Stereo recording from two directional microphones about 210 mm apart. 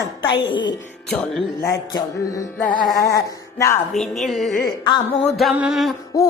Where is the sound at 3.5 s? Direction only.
15° left (ahead or behind).